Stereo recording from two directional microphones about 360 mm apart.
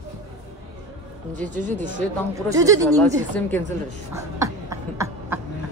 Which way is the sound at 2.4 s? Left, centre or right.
Centre.